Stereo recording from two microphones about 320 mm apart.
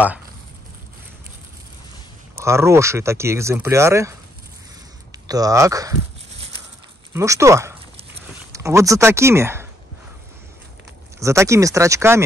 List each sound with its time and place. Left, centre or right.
2.4 s speech: centre
7.2 s speech: centre
11.1 s speech: centre